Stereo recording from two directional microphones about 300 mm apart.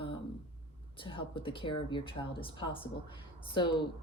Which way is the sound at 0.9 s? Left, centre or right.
Centre.